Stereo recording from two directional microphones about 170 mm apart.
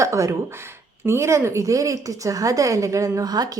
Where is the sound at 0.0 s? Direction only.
20° right (ahead or behind).